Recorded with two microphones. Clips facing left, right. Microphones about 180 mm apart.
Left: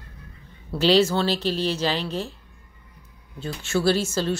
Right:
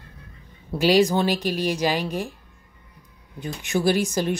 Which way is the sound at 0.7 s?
15° right (ahead or behind).